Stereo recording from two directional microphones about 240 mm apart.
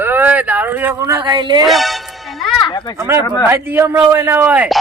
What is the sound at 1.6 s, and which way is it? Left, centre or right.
Music, centre.